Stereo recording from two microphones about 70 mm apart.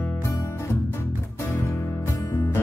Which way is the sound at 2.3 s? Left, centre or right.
Left.